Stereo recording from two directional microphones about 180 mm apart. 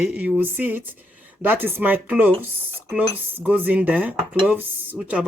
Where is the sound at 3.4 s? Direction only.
10° right (ahead or behind).